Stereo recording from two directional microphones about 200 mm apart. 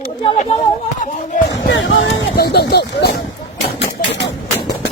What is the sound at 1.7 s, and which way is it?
Speech, 70° left (ahead or behind).